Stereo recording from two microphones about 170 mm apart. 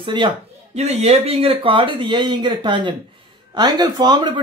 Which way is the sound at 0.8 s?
40° right (ahead or behind).